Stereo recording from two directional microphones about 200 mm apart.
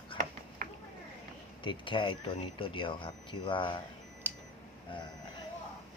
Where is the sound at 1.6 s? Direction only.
25° left (ahead or behind).